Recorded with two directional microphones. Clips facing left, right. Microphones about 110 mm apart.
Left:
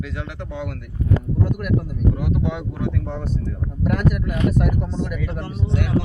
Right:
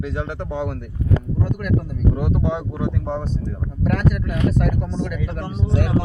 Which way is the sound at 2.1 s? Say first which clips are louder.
Right 2 dB; 35° right (ahead or behind).